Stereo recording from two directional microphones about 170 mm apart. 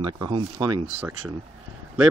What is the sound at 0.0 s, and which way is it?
Speech, 25° right (ahead or behind).